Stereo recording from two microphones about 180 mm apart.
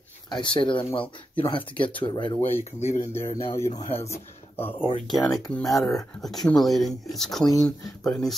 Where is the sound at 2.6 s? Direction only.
35° left (ahead or behind).